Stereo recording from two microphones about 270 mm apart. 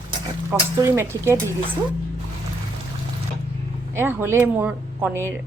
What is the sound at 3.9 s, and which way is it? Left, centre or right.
Speech, centre.